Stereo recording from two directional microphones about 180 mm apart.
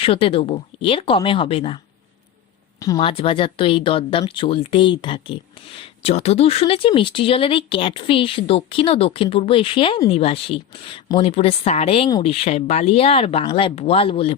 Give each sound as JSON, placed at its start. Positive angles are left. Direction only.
{"t": 0.0, "sound": "speech", "side_deg": 30}
{"t": 3.0, "sound": "speech", "side_deg": 30}